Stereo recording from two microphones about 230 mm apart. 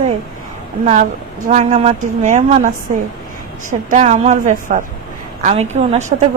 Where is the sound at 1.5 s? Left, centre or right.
Right.